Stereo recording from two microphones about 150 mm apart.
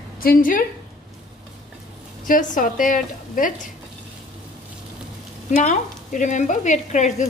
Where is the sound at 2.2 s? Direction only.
60° left (ahead or behind).